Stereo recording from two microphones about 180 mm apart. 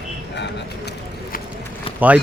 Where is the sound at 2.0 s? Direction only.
10° right (ahead or behind).